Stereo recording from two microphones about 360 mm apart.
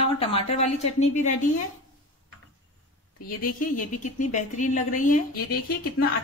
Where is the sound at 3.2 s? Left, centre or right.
Left.